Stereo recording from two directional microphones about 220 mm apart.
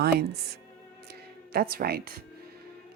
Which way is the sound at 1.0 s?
45° right (ahead or behind).